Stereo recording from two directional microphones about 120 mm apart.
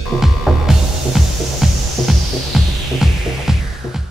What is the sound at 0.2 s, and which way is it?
Music, 5° right (ahead or behind).